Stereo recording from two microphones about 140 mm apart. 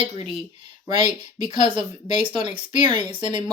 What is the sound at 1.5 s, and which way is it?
Speech, 35° right (ahead or behind).